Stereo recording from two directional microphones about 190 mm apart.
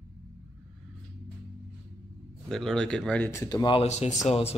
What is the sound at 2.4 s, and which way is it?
Speech, centre (ahead or behind).